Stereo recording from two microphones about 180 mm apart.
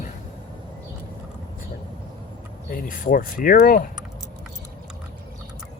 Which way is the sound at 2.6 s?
50° left (ahead or behind).